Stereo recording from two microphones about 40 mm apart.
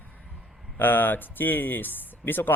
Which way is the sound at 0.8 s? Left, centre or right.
Left.